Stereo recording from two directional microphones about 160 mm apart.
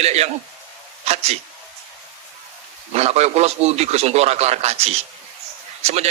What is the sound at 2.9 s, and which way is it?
A man's voice, 40° right (ahead or behind).